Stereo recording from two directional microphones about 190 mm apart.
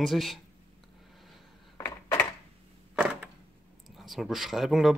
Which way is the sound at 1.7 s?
15° left (ahead or behind).